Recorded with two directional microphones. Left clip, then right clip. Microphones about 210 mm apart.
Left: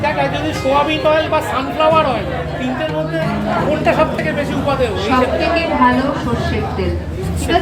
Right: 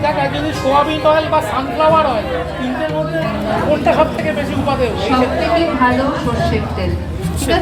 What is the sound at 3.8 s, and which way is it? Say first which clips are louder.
Speech: even; centre (ahead or behind).